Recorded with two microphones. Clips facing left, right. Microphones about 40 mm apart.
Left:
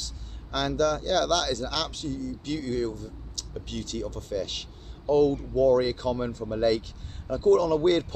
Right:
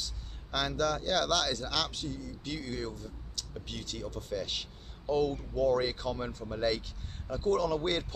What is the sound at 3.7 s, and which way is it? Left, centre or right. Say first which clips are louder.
Speech: left 7 dB; centre.